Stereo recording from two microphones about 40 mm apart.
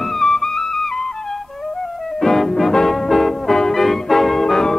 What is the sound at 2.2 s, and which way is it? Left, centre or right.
Music, centre.